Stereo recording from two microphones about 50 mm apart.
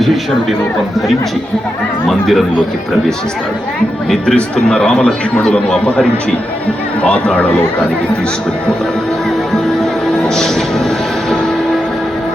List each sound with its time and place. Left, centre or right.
2.0 s speech: centre
4.4 s a man's voice: centre
7.0 s speech: left
10.1 s music: centre